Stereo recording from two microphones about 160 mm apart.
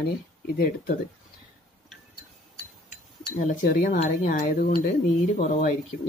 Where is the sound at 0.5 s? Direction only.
65° left (ahead or behind).